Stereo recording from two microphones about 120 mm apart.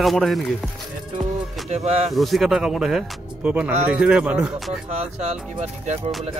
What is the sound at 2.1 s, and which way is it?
Speech, centre (ahead or behind).